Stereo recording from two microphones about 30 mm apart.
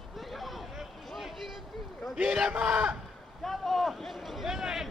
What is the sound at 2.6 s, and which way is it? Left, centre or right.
Speech, centre.